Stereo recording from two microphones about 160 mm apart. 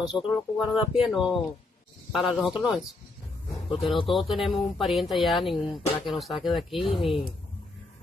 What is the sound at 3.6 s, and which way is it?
Speech, 30° left (ahead or behind).